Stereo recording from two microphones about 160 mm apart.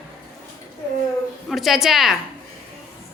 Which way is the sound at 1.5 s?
Centre (ahead or behind).